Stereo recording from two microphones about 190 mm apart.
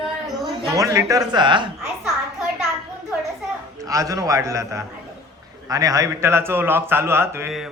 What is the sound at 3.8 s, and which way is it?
A man's voice, 15° right (ahead or behind).